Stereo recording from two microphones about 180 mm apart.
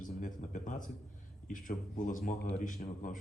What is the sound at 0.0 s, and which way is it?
Speech, 45° left (ahead or behind).